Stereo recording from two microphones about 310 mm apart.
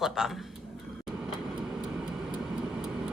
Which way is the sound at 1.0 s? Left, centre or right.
Centre.